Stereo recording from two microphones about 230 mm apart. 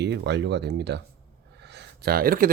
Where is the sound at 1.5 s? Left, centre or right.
Right.